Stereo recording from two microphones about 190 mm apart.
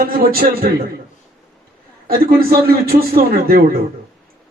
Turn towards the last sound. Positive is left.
turn(degrees=-50)  # may be behind; listen again after turning